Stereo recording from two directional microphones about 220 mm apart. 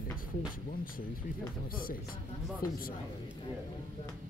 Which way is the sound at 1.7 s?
40° left (ahead or behind).